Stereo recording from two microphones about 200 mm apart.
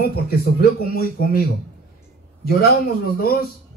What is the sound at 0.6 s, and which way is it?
Speech, 50° left (ahead or behind).